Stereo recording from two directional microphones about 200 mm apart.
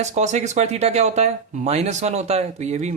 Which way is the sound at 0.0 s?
35° right (ahead or behind).